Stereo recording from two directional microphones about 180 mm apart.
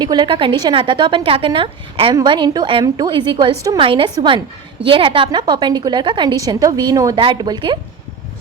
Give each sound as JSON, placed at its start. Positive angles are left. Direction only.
{"t": 0.0, "sound": "a woman's voice", "side_deg": -25}